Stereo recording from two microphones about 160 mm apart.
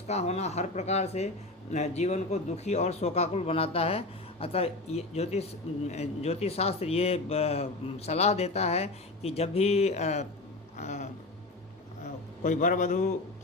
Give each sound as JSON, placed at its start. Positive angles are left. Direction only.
{"t": 0.1, "sound": "a man's voice", "side_deg": 40}
{"t": 12.4, "sound": "speech", "side_deg": 55}